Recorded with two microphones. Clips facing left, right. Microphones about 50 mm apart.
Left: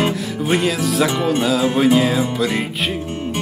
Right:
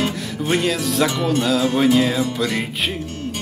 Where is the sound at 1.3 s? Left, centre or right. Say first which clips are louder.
Left 1 dB; centre.